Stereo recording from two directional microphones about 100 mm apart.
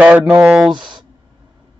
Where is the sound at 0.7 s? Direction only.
50° right (ahead or behind).